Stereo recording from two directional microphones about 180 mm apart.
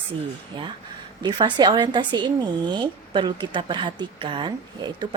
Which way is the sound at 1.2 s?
25° right (ahead or behind).